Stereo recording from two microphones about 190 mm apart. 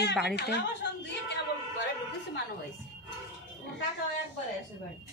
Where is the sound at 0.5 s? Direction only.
65° left (ahead or behind).